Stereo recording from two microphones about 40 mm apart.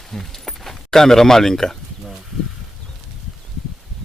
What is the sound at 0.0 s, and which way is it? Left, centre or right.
Speech, centre.